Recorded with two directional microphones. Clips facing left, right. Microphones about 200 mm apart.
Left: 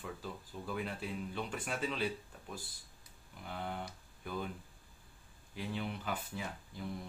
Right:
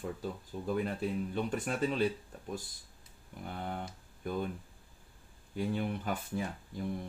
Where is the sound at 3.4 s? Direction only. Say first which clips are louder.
Right 2 dB; 45° right (ahead or behind).